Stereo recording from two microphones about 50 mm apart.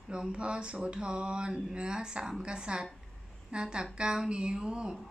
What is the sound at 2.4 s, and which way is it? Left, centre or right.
Speech, centre.